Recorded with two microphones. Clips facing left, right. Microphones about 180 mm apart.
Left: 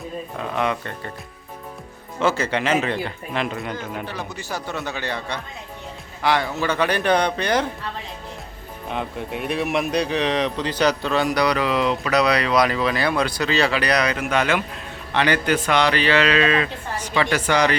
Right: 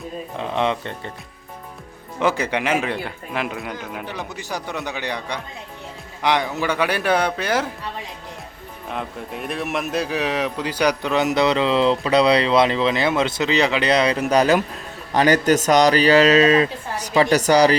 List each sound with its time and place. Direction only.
0.3 s speech: 25° right (ahead or behind)
2.1 s speech: 15° right (ahead or behind)
4.0 s speech: 15° right (ahead or behind)
8.9 s a man's voice: centre (ahead or behind); by 17.7 s 35° right (ahead or behind)